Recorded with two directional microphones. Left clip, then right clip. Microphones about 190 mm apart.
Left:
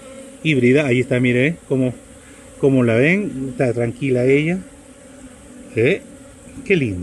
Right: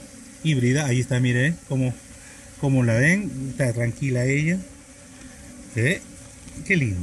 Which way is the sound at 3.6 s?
20° right (ahead or behind).